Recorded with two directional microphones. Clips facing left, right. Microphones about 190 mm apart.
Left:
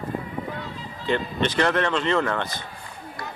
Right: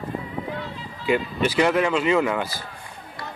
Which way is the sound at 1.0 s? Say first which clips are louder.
Right 2 dB; 10° right (ahead or behind).